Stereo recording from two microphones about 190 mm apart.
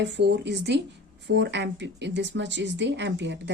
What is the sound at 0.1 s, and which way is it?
Speech, 65° right (ahead or behind).